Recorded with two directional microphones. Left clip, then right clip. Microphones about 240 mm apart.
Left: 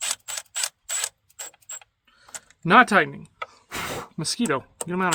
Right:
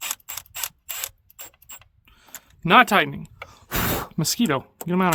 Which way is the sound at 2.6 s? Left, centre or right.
Right.